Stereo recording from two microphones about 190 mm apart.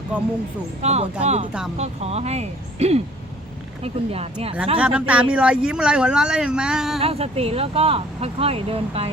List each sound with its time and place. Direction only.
0.8 s speech: 35° right (ahead or behind)
4.8 s speech: 5° right (ahead or behind)
7.0 s speech: 30° right (ahead or behind)